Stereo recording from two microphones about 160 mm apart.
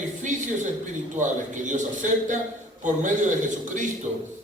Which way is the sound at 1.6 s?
50° right (ahead or behind).